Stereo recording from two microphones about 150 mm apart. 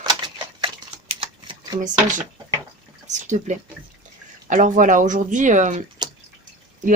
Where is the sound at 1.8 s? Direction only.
60° right (ahead or behind).